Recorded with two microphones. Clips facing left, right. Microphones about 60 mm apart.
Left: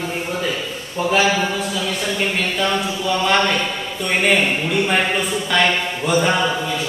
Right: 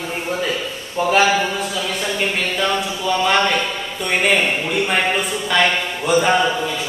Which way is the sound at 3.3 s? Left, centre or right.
Centre.